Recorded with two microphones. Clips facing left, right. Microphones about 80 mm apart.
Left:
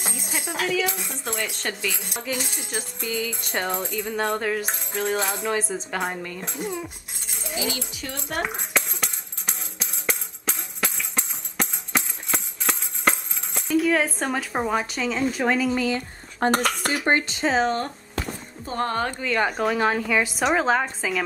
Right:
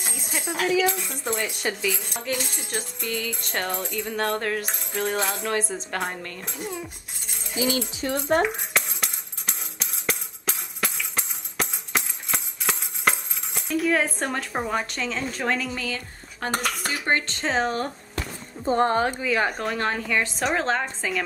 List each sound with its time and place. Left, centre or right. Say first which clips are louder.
0.3 s speech: right 1 dB; centre
0.7 s speech: right 5 dB; centre
2.0 s speech: even; centre
6.6 s a sound: left 3 dB; centre
8.0 s speech: right 9 dB; right
8.5 s music: left 1 dB; centre
13.6 s speech: left 2 dB; centre
15.7 s speech: left 7 dB; left
16.4 s speech: left 5 dB; left
17.0 s speech: left 2 dB; centre
17.3 s speech: left 3 dB; centre
18.7 s speech: right 5 dB; right
19.0 s speech: even; centre